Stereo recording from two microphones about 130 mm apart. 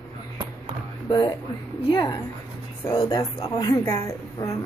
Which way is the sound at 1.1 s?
35° left (ahead or behind).